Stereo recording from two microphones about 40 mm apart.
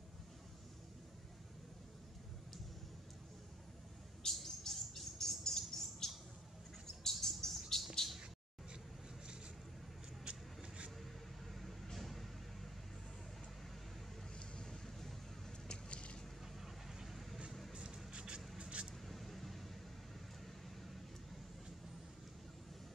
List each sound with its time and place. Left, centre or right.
4.2 s bird: centre
8.0 s a sound: centre
11.5 s vehicle: centre
14.4 s vehicle: centre
15.0 s vehicle: centre
15.7 s vehicle: left
16.6 s vehicle: centre
17.7 s a sound: right
18.6 s vehicle: right
19.0 s a sound: centre